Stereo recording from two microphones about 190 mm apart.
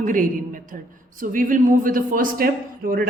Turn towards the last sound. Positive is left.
turn(degrees=-50)  # may be behind; listen again after turning